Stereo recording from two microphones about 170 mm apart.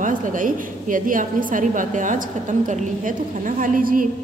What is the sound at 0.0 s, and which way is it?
A woman's voice, 50° right (ahead or behind).